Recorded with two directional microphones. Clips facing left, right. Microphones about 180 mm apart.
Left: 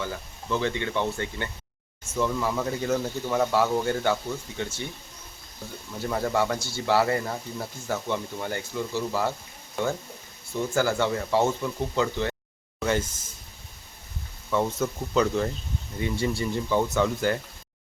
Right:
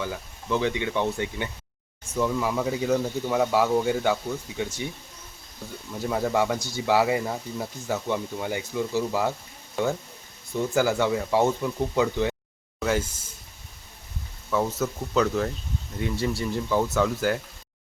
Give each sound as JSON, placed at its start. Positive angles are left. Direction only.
{"t": 0.0, "sound": "speech", "side_deg": -10}
{"t": 6.0, "sound": "speech", "side_deg": -5}
{"t": 11.0, "sound": "speech", "side_deg": -10}
{"t": 14.5, "sound": "speech", "side_deg": -5}